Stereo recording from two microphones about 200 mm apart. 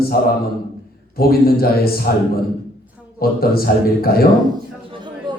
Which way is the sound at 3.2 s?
50° left (ahead or behind).